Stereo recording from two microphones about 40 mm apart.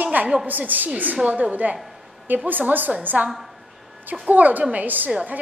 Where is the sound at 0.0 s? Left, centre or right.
Right.